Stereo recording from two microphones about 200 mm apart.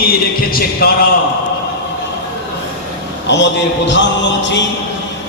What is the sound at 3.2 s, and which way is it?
Music, 60° left (ahead or behind).